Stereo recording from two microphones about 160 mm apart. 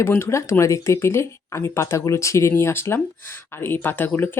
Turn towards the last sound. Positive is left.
turn(degrees=10)  # may be behind; listen again after turning